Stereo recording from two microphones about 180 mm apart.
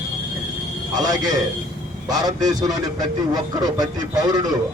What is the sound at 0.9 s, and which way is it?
A man's voice, 20° right (ahead or behind).